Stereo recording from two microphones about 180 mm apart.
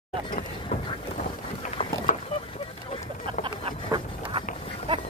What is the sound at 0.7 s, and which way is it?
Boat, 40° left (ahead or behind).